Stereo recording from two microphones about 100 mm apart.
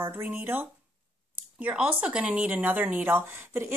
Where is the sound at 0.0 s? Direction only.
20° right (ahead or behind).